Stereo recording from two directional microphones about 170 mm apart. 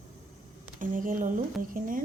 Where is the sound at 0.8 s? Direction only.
50° right (ahead or behind).